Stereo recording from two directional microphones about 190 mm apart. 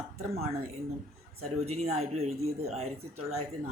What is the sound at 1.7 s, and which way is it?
A woman's voice, 35° right (ahead or behind).